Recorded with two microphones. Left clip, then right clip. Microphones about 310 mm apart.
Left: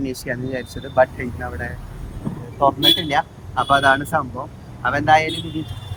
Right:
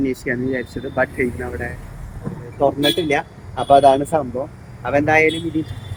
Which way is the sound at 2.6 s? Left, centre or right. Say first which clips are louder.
Left 2 dB; left.